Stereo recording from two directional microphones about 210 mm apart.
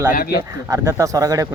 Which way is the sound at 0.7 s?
15° right (ahead or behind).